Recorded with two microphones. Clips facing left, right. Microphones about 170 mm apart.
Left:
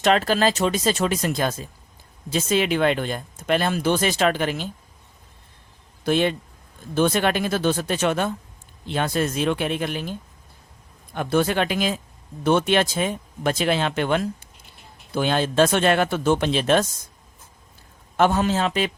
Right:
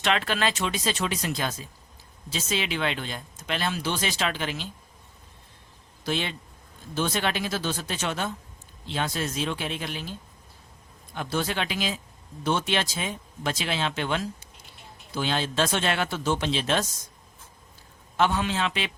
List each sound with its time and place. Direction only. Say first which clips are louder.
0.0 s speech: left 7 dB; 40° left (ahead or behind)
6.1 s speech: left 9 dB; 50° left (ahead or behind)
18.2 s a man's voice: left 5 dB; 45° left (ahead or behind)